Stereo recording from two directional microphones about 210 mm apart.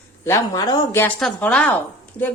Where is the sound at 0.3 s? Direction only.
20° left (ahead or behind).